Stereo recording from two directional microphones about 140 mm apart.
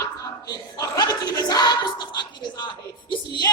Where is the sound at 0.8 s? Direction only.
30° left (ahead or behind).